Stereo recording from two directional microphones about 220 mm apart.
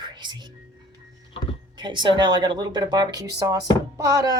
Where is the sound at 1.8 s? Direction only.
20° right (ahead or behind).